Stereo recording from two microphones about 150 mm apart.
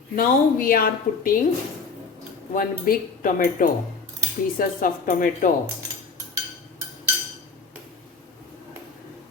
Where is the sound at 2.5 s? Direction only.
65° left (ahead or behind).